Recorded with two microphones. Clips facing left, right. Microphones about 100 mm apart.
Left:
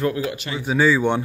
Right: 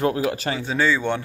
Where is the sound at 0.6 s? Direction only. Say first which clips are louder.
Left 5 dB; 10° left (ahead or behind).